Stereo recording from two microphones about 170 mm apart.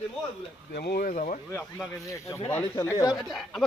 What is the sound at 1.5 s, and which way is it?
Speech, 15° left (ahead or behind).